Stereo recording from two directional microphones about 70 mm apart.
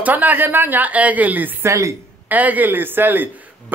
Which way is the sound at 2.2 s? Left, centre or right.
Right.